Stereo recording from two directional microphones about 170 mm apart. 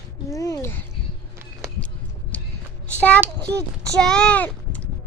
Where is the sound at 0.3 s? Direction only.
20° left (ahead or behind).